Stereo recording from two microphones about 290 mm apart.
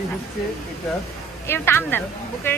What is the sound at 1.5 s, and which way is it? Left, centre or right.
Speech, centre.